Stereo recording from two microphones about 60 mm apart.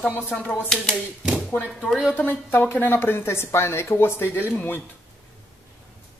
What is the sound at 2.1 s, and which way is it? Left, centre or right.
Speech, left.